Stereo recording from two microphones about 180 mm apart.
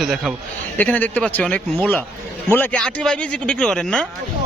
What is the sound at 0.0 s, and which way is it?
A man's voice, centre (ahead or behind).